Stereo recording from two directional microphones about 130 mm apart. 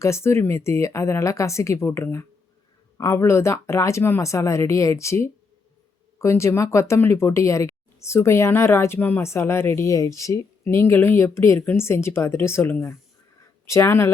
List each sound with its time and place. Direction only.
0.0 s speech: 20° left (ahead or behind)